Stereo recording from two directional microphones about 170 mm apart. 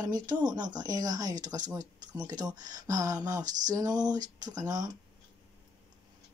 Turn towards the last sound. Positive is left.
turn(degrees=-20)  # may be behind; listen again after turning